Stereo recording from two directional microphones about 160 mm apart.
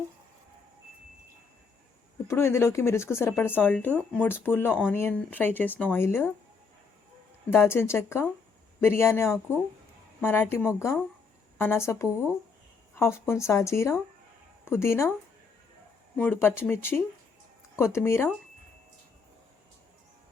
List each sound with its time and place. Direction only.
2.2 s speech: 15° left (ahead or behind)
7.5 s speech: 15° left (ahead or behind)
16.1 s speech: 10° left (ahead or behind)